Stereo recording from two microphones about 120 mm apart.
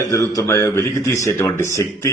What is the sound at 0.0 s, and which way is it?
A man's voice, 30° left (ahead or behind).